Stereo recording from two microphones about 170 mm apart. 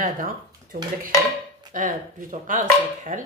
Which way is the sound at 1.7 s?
50° right (ahead or behind).